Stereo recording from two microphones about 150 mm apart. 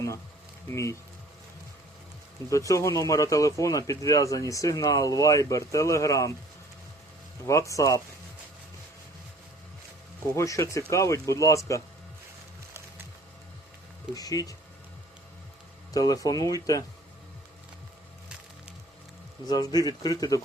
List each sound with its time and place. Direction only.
0.7 s speech: 20° left (ahead or behind)
2.5 s speech: 20° left (ahead or behind)
7.4 s speech: 20° left (ahead or behind)
10.3 s speech: 20° left (ahead or behind)
14.2 s speech: 25° left (ahead or behind)
15.9 s speech: 25° left (ahead or behind)
19.5 s speech: 25° left (ahead or behind)